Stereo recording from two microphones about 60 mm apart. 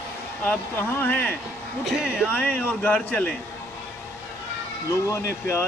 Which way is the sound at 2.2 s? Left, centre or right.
Left.